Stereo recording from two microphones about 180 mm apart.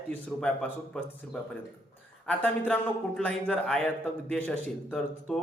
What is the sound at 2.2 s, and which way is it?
A man's voice, 10° left (ahead or behind).